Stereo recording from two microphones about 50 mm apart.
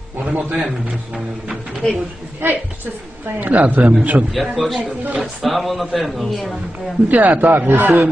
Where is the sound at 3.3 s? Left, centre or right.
Right.